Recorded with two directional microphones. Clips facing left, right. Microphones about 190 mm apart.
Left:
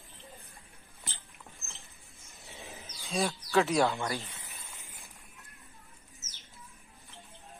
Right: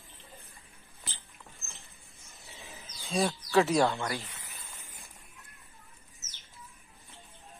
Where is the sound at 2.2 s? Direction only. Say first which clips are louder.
Left 3 dB; centre (ahead or behind).